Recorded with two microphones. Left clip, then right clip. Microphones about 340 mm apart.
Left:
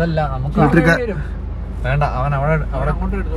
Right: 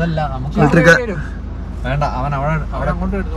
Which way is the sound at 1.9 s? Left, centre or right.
Left.